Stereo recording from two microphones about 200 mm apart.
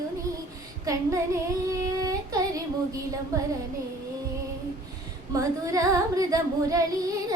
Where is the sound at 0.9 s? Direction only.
15° right (ahead or behind).